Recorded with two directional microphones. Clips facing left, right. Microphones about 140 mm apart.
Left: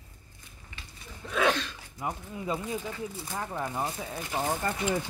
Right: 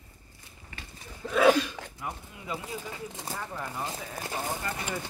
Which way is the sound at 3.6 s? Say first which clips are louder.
Left 6 dB; 35° left (ahead or behind).